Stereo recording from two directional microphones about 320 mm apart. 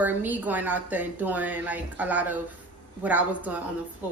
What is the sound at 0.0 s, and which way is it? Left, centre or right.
A woman's voice, centre.